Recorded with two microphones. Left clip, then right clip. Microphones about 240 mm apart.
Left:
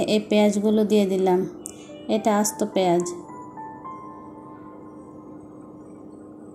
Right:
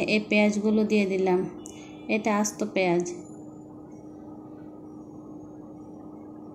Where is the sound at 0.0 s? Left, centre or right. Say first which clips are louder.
Left 3 dB; left.